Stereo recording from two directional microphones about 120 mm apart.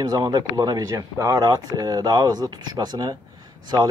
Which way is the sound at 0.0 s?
35° right (ahead or behind).